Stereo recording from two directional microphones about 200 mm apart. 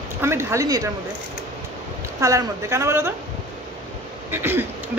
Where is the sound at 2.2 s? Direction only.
15° right (ahead or behind).